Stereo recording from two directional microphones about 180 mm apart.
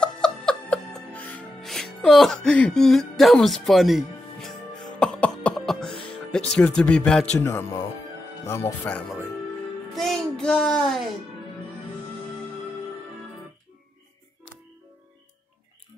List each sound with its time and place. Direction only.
0.0 s music: 5° left (ahead or behind)
6.0 s a child's voice: 5° left (ahead or behind)